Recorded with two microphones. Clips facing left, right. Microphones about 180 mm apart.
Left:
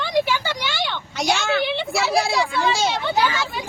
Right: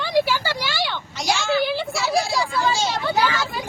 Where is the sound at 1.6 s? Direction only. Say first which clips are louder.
Left 1 dB; centre (ahead or behind).